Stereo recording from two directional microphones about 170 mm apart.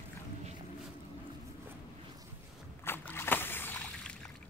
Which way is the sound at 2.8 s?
15° left (ahead or behind).